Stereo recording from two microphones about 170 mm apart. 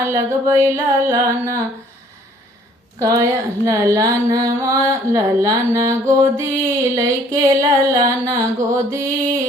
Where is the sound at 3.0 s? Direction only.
20° right (ahead or behind).